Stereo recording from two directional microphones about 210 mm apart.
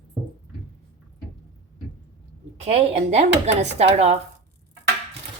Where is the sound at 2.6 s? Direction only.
30° right (ahead or behind).